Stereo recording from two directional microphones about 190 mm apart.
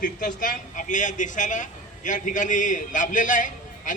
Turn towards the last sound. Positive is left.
turn(degrees=45)  # may be behind; listen again after turning